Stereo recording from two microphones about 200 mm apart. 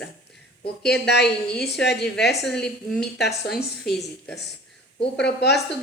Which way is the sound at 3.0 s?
55° left (ahead or behind).